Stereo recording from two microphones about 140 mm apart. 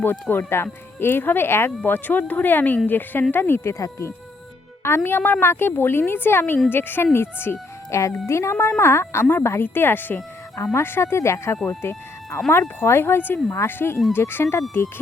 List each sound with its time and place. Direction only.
0.0 s speech: 15° left (ahead or behind)
11.7 s a sound: 20° left (ahead or behind)
12.5 s speech: 15° left (ahead or behind)